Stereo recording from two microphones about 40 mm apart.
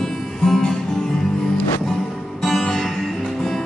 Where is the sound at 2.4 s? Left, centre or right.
Centre.